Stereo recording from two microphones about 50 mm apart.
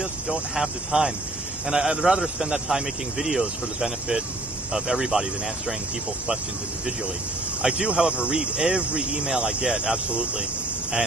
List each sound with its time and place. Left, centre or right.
0.6 s a man's voice: centre
7.6 s speech: centre